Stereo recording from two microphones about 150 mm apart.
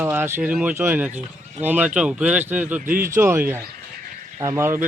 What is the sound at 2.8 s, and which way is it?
Speech, 70° right (ahead or behind).